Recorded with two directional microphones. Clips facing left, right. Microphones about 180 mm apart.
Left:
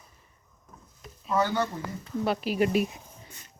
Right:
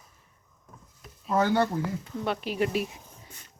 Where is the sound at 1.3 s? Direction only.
55° right (ahead or behind).